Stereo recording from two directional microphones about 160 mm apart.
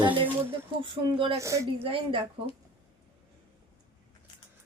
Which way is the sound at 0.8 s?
35° right (ahead or behind).